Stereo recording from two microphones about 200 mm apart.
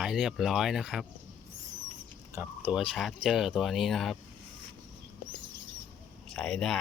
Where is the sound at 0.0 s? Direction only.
5° right (ahead or behind).